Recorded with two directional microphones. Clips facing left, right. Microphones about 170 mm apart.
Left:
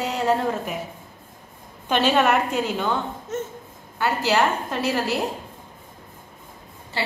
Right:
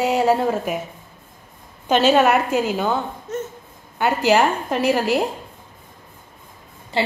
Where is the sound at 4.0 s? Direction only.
15° right (ahead or behind).